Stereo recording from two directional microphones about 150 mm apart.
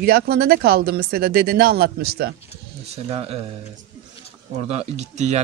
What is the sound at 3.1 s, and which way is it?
Speech, 40° right (ahead or behind).